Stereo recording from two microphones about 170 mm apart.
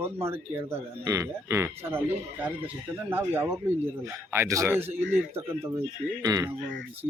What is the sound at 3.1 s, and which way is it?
Speech, 15° right (ahead or behind).